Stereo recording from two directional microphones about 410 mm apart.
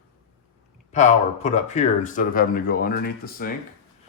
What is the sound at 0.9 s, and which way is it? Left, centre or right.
Speech, centre.